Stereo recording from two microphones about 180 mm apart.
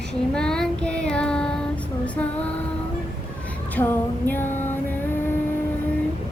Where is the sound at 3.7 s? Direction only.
10° left (ahead or behind).